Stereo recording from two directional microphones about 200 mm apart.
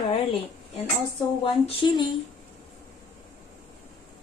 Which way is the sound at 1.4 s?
25° left (ahead or behind).